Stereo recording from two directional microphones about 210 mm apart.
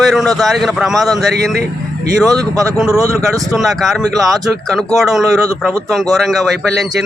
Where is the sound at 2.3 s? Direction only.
15° right (ahead or behind).